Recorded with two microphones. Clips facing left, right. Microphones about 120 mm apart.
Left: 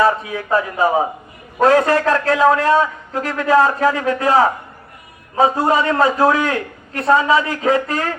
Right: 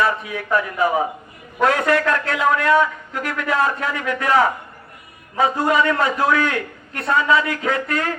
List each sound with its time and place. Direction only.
0.0 s a man's voice: 35° left (ahead or behind)